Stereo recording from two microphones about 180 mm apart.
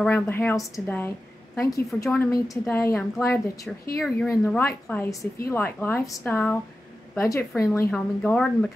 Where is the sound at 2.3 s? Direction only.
20° left (ahead or behind).